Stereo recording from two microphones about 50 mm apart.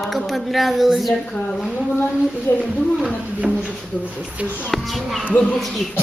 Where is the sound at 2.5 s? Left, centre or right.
Left.